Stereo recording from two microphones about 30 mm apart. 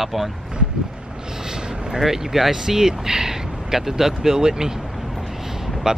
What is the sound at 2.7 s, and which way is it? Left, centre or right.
Speech, right.